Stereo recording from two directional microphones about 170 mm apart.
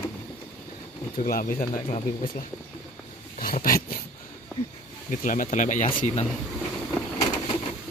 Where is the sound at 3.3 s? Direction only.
55° left (ahead or behind).